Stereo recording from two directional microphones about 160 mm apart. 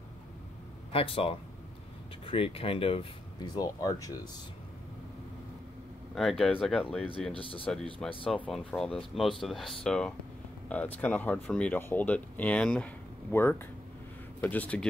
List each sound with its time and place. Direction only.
0.9 s speech: 35° left (ahead or behind)
6.1 s speech: centre (ahead or behind)